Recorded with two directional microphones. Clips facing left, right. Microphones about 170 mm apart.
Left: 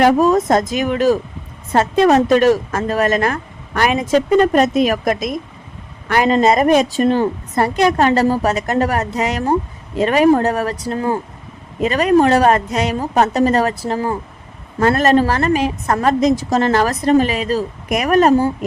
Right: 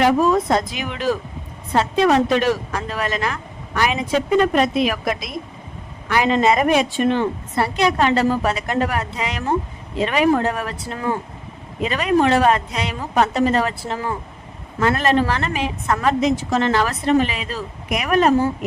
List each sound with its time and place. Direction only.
0.0 s a woman's voice: 45° left (ahead or behind)